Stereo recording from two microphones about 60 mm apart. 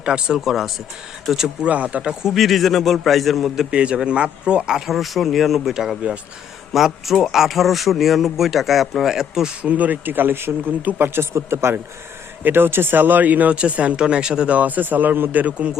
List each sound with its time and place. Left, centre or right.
0.0 s speech: centre
0.3 s a man's voice: centre
1.6 s speech: right
2.0 s a man's voice: centre
9.6 s speech: right
11.3 s speech: right
12.4 s speech: right